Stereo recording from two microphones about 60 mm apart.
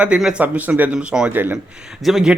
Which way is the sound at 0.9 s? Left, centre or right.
Centre.